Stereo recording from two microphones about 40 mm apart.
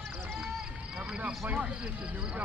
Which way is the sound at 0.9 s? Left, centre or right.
Right.